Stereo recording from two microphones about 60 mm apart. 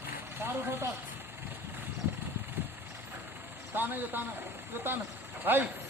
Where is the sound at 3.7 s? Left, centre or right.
Right.